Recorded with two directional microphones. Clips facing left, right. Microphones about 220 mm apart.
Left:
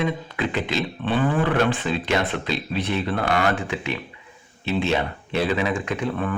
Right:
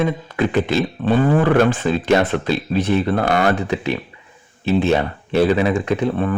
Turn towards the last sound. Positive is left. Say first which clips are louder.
# right 6 dB
turn(degrees=-35)  # may be behind; listen again after turning